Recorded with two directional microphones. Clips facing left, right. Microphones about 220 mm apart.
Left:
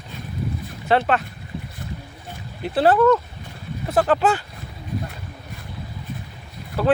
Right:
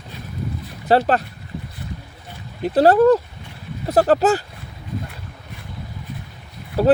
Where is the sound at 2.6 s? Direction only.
40° right (ahead or behind).